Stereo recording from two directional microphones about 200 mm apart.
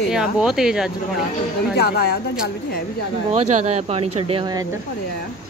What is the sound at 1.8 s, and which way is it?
Speech, 50° left (ahead or behind).